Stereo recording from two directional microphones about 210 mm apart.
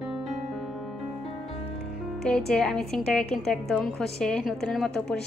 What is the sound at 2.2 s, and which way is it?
A woman's voice, 5° left (ahead or behind).